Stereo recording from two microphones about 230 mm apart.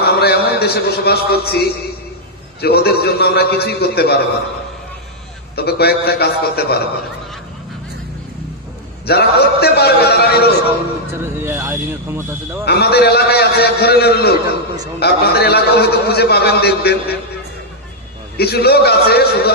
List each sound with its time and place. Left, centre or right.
0.0 s a man's voice: left
5.5 s a man's voice: left
9.0 s a man's voice: left
11.1 s speech: centre
12.6 s a man's voice: left
18.3 s a man's voice: left